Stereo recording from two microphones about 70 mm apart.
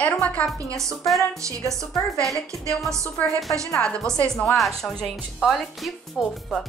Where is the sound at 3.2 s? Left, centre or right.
Centre.